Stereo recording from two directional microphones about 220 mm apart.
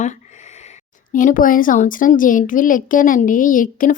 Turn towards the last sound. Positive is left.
turn(degrees=35)  # may be behind; listen again after turning